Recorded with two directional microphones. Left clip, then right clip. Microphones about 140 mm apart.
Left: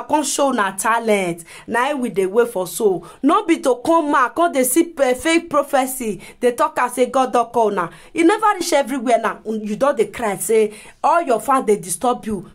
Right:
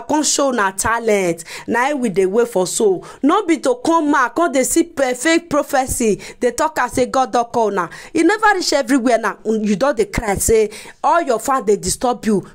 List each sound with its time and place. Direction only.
0.1 s a woman's voice: 25° right (ahead or behind)
2.0 s speech: 20° right (ahead or behind); by 9.4 s 40° right (ahead or behind)
9.5 s speech: 25° right (ahead or behind)
9.8 s a woman's voice: 40° right (ahead or behind)
11.0 s speech: 25° right (ahead or behind)